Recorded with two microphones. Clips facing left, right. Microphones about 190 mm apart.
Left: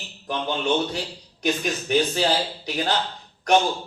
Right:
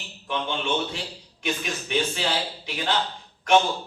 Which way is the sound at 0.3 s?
40° left (ahead or behind).